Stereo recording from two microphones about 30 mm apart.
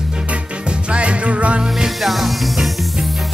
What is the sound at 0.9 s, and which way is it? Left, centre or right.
Music, right.